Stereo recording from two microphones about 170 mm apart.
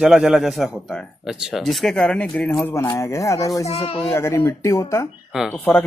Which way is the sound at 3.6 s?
35° left (ahead or behind).